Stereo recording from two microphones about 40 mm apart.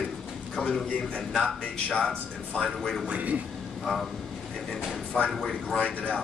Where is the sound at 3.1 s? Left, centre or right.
Right.